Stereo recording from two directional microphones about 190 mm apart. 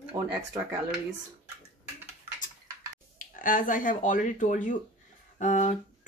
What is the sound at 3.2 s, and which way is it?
Speech, 45° left (ahead or behind).